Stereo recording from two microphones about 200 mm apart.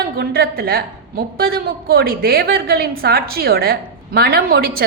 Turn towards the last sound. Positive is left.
turn(degrees=-50)  # may be behind; listen again after turning